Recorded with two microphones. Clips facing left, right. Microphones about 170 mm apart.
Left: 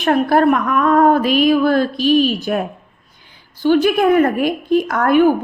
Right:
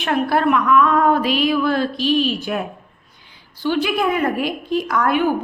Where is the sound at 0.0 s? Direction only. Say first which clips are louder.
Left 5 dB; 45° left (ahead or behind).